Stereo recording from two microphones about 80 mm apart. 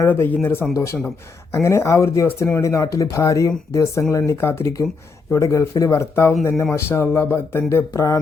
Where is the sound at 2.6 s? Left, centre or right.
Left.